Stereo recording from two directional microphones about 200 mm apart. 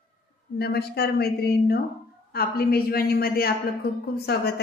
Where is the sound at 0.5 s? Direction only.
55° left (ahead or behind).